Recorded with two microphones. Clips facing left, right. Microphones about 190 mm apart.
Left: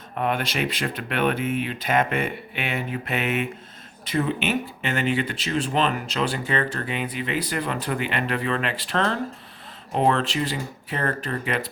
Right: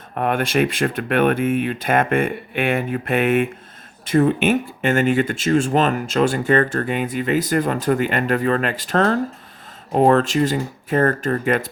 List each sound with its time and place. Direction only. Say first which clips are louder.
0.1 s speech: right 5 dB; 50° right (ahead or behind)